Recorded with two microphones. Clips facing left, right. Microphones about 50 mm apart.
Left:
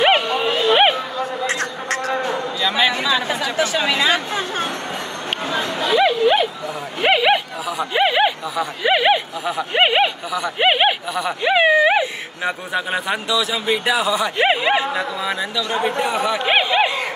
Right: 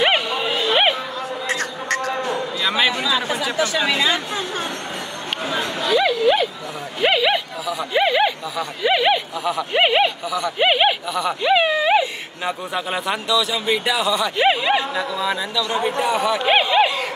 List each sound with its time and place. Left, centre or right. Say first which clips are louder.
0.0 s a sound: left 3 dB; centre
3.5 s speech: left 2 dB; left
5.8 s speech: left 2 dB; centre
7.6 s speech: right 1 dB; centre
11.4 s a sound: left 3 dB; centre
12.7 s speech: left 2 dB; centre